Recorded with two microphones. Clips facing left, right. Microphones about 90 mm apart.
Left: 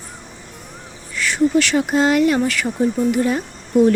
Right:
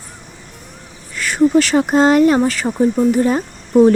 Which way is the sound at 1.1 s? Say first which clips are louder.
Right 4 dB; 45° right (ahead or behind).